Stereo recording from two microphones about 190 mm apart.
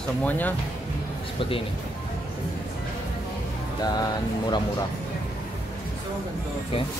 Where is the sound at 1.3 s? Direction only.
30° left (ahead or behind).